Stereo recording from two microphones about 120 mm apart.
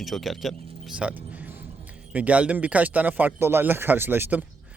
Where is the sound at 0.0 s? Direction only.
Centre (ahead or behind).